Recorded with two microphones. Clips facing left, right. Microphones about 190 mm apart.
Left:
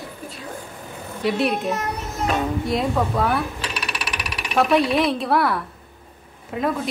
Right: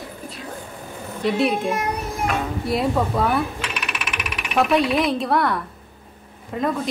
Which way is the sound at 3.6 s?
35° left (ahead or behind).